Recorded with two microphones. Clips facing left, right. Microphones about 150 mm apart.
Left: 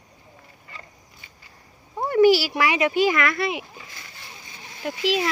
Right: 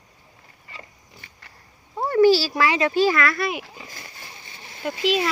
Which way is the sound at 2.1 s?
15° left (ahead or behind).